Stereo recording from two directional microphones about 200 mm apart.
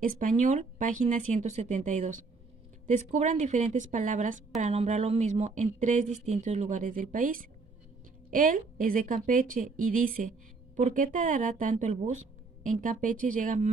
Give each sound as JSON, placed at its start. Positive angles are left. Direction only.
{"t": 0.0, "sound": "a woman's voice", "side_deg": -40}